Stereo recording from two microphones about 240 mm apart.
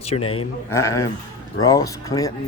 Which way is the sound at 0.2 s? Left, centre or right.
Left.